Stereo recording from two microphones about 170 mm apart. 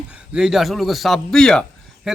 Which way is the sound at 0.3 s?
5° right (ahead or behind).